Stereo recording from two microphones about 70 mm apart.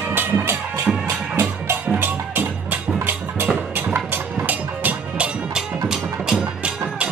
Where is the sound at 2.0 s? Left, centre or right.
Right.